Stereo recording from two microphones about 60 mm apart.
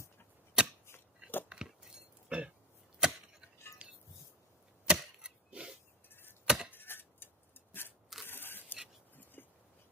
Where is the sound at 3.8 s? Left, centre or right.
Right.